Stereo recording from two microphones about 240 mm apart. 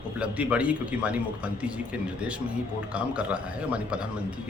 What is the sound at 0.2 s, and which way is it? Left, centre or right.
A man's voice, centre.